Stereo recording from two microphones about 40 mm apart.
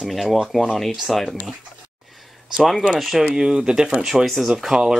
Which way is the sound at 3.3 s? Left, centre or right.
Centre.